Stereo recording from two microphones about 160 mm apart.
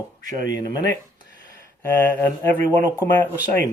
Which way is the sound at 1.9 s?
10° left (ahead or behind).